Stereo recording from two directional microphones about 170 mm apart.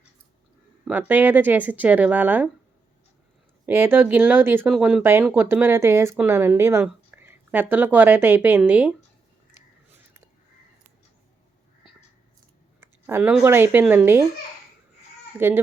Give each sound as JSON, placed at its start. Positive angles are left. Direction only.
{"t": 0.9, "sound": "speech", "side_deg": -10}
{"t": 3.7, "sound": "speech", "side_deg": -15}
{"t": 12.8, "sound": "a sound", "side_deg": -15}
{"t": 13.4, "sound": "speech", "side_deg": -15}
{"t": 15.4, "sound": "speech", "side_deg": -15}